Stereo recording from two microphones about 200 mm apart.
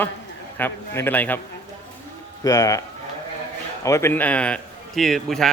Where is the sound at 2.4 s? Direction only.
15° left (ahead or behind).